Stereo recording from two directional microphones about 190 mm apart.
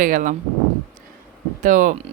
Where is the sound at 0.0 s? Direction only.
45° right (ahead or behind).